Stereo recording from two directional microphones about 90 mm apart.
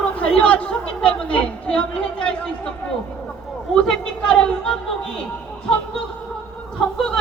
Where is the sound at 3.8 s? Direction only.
10° left (ahead or behind).